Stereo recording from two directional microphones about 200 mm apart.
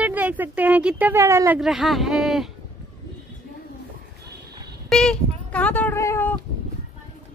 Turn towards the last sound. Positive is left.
turn(degrees=10)  # may be behind; listen again after turning